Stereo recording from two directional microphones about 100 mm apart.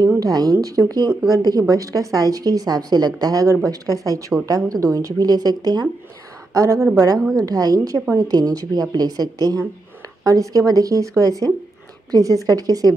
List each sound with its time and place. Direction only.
0.2 s a woman's voice: 40° right (ahead or behind)